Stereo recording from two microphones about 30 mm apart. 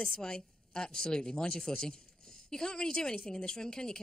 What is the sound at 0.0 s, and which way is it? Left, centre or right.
A woman's voice, left.